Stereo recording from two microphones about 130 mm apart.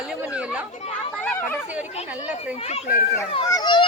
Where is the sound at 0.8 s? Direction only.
45° left (ahead or behind).